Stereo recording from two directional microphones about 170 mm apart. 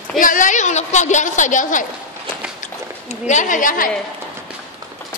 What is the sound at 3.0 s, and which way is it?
Speech, 45° left (ahead or behind).